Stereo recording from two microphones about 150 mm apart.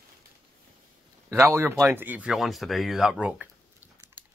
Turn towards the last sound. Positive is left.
turn(degrees=-5)  # may be behind; listen again after turning